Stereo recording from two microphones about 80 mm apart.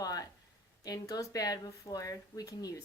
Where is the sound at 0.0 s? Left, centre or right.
Left.